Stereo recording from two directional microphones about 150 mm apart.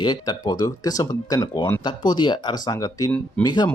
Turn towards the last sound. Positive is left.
turn(degrees=30)  # may be behind; listen again after turning